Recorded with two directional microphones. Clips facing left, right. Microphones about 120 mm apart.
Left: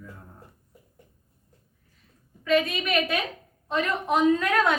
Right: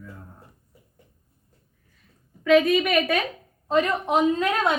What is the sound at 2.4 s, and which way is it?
Speech, 85° right.